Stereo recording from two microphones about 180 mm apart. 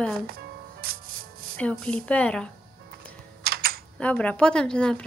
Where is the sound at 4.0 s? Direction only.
5° left (ahead or behind).